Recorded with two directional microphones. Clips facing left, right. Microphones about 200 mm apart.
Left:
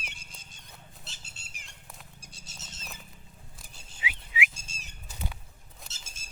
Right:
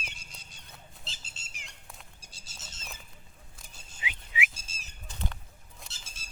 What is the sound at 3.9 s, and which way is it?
Whistling, 5° left (ahead or behind).